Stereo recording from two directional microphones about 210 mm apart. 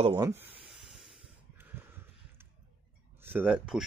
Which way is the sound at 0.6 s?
Centre (ahead or behind).